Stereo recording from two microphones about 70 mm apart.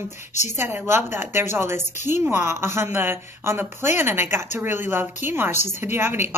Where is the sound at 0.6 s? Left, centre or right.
Right.